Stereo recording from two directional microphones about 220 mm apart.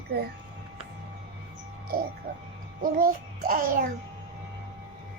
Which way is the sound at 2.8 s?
40° right (ahead or behind).